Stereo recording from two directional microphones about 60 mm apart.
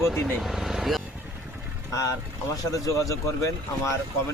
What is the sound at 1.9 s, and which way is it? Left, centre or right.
Speech, left.